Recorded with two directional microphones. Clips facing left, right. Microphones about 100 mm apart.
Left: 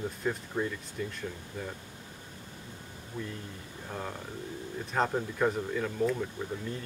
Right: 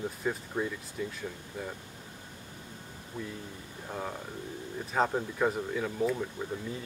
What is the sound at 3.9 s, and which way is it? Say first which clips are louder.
Speech: right 1 dB; 5° right (ahead or behind).